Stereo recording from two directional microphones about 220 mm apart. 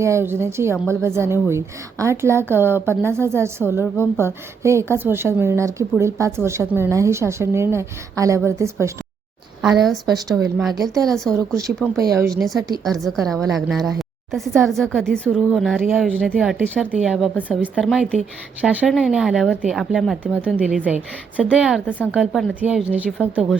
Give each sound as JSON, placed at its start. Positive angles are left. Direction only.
{"t": 0.0, "sound": "a woman's voice", "side_deg": -10}
{"t": 9.6, "sound": "a woman's voice", "side_deg": 0}
{"t": 12.4, "sound": "a woman's voice", "side_deg": 0}